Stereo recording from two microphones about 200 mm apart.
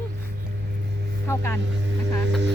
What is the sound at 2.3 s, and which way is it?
Speech, 60° right (ahead or behind).